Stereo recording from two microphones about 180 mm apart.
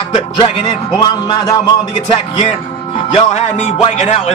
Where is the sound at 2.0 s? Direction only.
40° left (ahead or behind).